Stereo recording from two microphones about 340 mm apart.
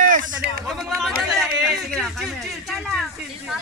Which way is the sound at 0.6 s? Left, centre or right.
Centre.